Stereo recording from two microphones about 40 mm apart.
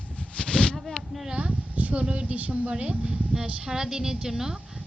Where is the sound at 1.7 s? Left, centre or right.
Right.